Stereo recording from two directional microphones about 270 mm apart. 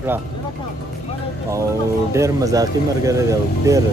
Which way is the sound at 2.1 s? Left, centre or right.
Centre.